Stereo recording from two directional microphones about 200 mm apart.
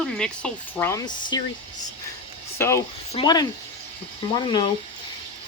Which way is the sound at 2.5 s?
10° left (ahead or behind).